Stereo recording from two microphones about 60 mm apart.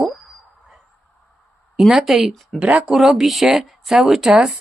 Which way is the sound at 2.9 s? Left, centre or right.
Centre.